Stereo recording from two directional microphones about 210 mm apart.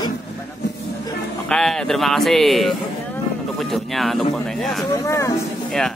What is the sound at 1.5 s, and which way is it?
Speech, 5° left (ahead or behind).